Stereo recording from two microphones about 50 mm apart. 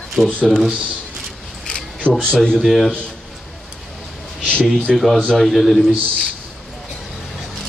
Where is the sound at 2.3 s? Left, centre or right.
Centre.